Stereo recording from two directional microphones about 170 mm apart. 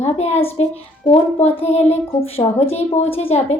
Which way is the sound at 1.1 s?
10° left (ahead or behind).